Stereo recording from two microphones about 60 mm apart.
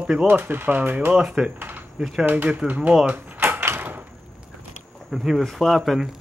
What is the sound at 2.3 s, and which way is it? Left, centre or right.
Speech, right.